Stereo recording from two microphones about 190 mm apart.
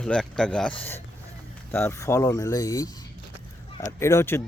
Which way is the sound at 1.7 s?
15° left (ahead or behind).